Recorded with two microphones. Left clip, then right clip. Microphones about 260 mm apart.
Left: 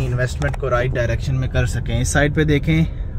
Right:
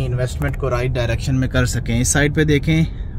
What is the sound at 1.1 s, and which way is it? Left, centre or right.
Speech, right.